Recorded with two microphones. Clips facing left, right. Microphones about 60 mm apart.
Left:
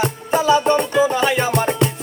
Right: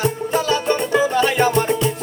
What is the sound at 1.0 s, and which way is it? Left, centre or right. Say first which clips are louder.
Music: even; centre.